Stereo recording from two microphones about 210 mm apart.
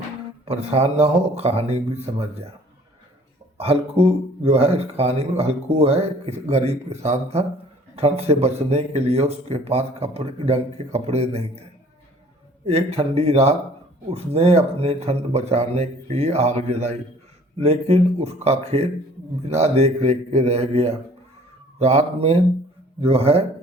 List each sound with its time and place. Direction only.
0.4 s speech: 30° right (ahead or behind)
3.6 s speech: 25° right (ahead or behind)
12.6 s speech: 30° right (ahead or behind)